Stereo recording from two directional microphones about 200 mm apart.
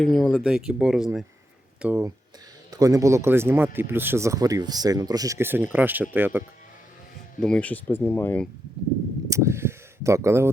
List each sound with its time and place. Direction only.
0.0 s speech: 5° left (ahead or behind)
7.3 s speech: 5° left (ahead or behind)
9.3 s a sound: 15° right (ahead or behind)